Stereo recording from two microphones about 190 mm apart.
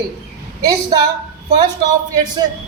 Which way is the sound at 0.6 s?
20° right (ahead or behind).